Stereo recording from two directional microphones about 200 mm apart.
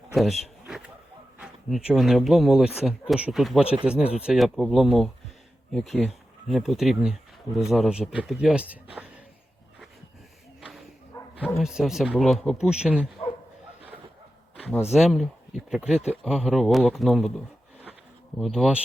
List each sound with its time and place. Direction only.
0.1 s a sound: centre (ahead or behind)
1.4 s speech: 5° right (ahead or behind)
10.6 s bow-wow: centre (ahead or behind)
11.4 s speech: centre (ahead or behind)
14.9 s speech: centre (ahead or behind)